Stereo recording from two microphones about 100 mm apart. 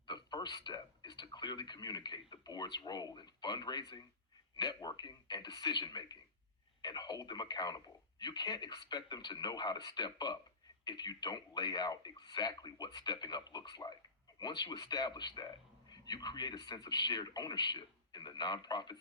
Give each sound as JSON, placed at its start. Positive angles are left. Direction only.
{"t": 0.1, "sound": "speech", "side_deg": 45}